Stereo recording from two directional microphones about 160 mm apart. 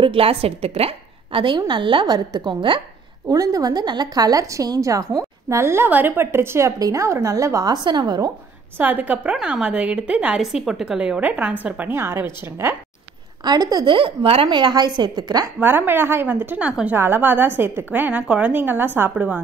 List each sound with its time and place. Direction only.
0.0 s a woman's voice: 35° right (ahead or behind)
8.7 s a woman's voice: 10° right (ahead or behind)
13.4 s a woman's voice: 25° right (ahead or behind)
15.6 s a woman's voice: 10° right (ahead or behind)